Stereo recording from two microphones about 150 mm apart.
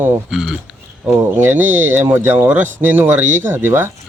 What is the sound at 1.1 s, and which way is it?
Speech, 15° right (ahead or behind).